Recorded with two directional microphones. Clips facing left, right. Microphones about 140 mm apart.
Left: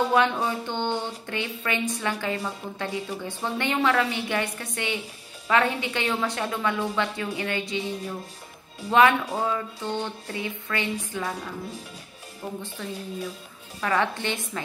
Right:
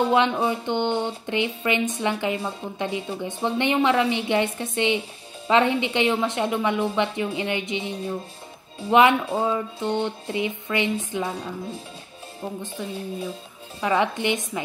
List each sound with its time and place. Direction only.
0.1 s speech: 20° right (ahead or behind)
12.6 s a woman's voice: 15° right (ahead or behind)